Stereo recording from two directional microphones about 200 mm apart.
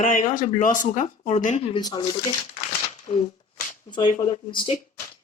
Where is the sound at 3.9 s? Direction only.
25° left (ahead or behind).